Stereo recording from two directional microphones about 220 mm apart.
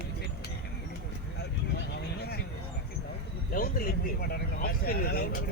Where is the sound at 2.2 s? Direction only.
45° left (ahead or behind).